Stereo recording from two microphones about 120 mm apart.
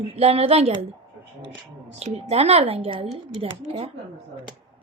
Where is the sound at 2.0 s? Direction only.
60° right (ahead or behind).